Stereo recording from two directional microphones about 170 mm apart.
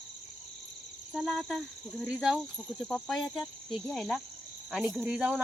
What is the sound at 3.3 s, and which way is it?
Cricket, 25° left (ahead or behind).